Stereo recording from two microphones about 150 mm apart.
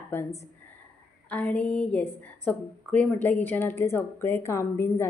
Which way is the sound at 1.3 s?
10° left (ahead or behind).